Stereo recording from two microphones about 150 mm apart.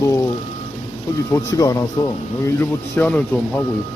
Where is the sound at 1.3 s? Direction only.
20° left (ahead or behind).